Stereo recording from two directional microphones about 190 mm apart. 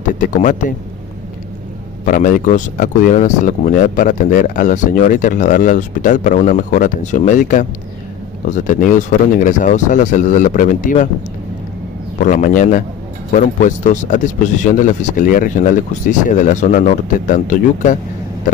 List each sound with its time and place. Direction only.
0.0 s a man's voice: 40° left (ahead or behind)
2.0 s speech: 45° left (ahead or behind)
12.2 s speech: 45° left (ahead or behind)